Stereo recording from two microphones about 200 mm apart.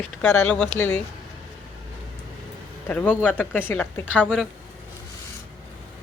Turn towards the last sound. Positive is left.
turn(degrees=5)  # may be behind; listen again after turning